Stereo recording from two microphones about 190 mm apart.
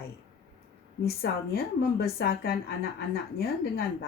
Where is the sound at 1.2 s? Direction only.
60° left (ahead or behind).